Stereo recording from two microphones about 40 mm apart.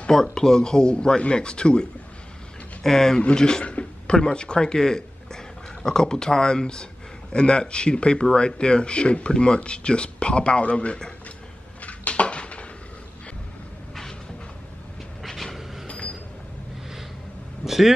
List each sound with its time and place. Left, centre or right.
0.1 s speech: centre
2.8 s speech: centre
3.2 s speech: left
3.6 s a sound: left
4.2 s speech: left
11.8 s a sound: left
15.2 s vehicle: centre
17.6 s vehicle: centre